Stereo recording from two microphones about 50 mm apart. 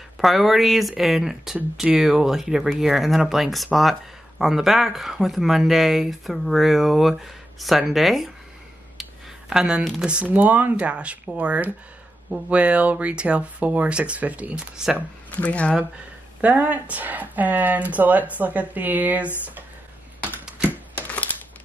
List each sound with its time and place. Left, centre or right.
0.2 s speech: centre
9.5 s speech: centre
10.2 s speech: right; by 15.0 s centre
15.4 s speech: left
16.3 s speech: right
21.1 s a sound: left